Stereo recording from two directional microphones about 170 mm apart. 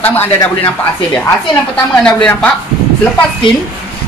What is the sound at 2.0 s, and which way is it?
Speech, 5° left (ahead or behind).